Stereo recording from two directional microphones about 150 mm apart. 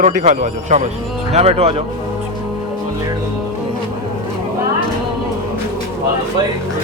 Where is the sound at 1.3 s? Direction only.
45° right (ahead or behind).